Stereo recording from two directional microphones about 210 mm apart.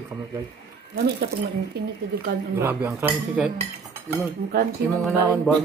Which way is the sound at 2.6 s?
10° right (ahead or behind).